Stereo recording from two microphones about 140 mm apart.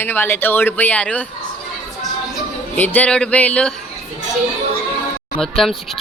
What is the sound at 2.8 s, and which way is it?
Speech, 10° left (ahead or behind).